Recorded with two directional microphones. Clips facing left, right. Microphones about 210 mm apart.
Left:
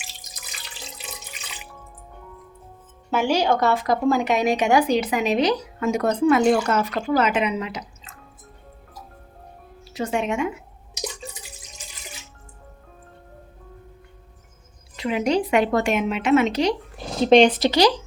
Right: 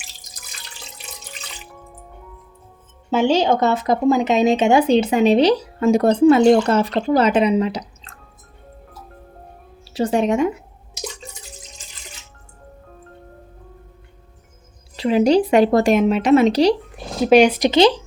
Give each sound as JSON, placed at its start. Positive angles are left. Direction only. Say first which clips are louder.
{"t": 3.1, "sound": "speech", "louder": "right 4 dB", "side_deg": -25}
{"t": 9.9, "sound": "speech", "louder": "right 6 dB", "side_deg": -35}
{"t": 14.9, "sound": "speech", "louder": "right 7 dB", "side_deg": -35}
{"t": 17.2, "sound": "speech", "louder": "right 2 dB", "side_deg": -10}
{"t": 17.7, "sound": "speech", "louder": "right 4 dB", "side_deg": -25}